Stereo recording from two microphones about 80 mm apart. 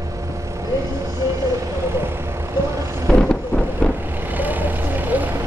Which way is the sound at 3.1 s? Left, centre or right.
Centre.